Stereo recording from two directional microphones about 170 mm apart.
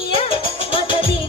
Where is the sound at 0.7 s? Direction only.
30° left (ahead or behind).